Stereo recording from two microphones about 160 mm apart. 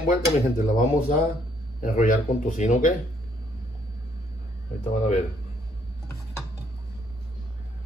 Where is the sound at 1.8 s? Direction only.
60° left (ahead or behind).